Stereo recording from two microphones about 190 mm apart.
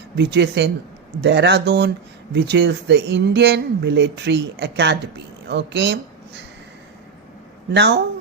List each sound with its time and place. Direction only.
0.2 s a woman's voice: 65° right (ahead or behind)
7.7 s speech: 65° right (ahead or behind)